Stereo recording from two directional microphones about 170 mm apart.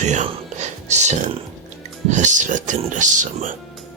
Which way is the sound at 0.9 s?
45° right (ahead or behind).